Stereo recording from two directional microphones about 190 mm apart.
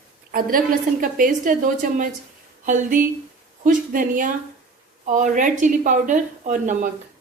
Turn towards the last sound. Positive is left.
turn(degrees=-40)  # may be behind; listen again after turning